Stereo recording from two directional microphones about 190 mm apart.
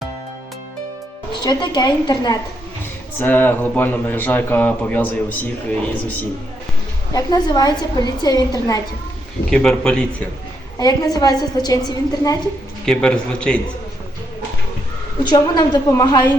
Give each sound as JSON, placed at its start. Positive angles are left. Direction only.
{"t": 1.4, "sound": "a woman's voice", "side_deg": 20}
{"t": 3.2, "sound": "speech", "side_deg": 10}
{"t": 7.1, "sound": "a woman's voice", "side_deg": 20}
{"t": 9.5, "sound": "a man's voice", "side_deg": 5}
{"t": 10.8, "sound": "a woman's voice", "side_deg": 20}
{"t": 12.8, "sound": "a man's voice", "side_deg": 5}
{"t": 15.2, "sound": "a woman's voice", "side_deg": 25}